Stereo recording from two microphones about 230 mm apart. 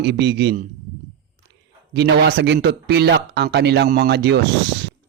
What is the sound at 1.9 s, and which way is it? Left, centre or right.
Speech, right.